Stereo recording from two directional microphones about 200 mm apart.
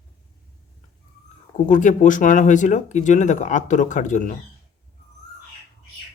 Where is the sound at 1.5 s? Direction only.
40° left (ahead or behind).